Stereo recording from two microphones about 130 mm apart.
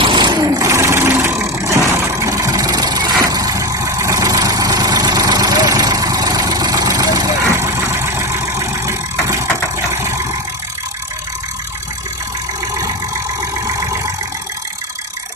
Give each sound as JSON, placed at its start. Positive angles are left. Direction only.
{"t": 0.0, "sound": "vehicle", "side_deg": -35}
{"t": 13.7, "sound": "vehicle", "side_deg": -25}